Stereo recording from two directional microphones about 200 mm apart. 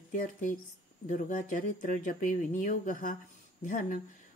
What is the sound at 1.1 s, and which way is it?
Speech, 40° left (ahead or behind).